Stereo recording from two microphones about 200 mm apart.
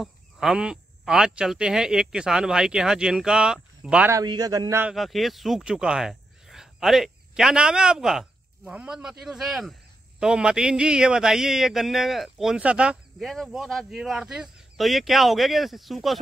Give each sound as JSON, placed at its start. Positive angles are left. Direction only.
{"t": 0.0, "sound": "speech", "side_deg": 0}
{"t": 4.2, "sound": "a man's voice", "side_deg": -20}
{"t": 4.9, "sound": "speech", "side_deg": 0}